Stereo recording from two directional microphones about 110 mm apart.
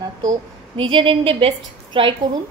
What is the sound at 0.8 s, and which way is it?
A woman's voice, 50° right (ahead or behind).